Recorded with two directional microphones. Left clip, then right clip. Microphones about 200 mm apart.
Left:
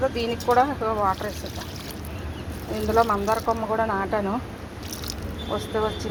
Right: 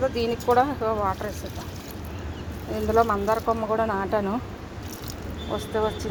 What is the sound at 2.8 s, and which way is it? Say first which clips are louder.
Speech: even; 15° right (ahead or behind).